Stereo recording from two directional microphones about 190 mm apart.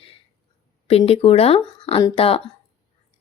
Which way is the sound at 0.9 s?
30° left (ahead or behind).